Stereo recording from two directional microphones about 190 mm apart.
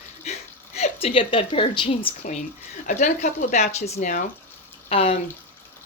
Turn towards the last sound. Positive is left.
turn(degrees=35)  # may be behind; listen again after turning